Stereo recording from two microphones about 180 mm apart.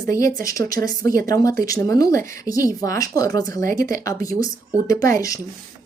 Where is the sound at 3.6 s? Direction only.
50° right (ahead or behind).